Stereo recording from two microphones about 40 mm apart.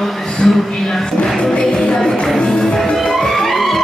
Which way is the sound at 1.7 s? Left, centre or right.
Centre.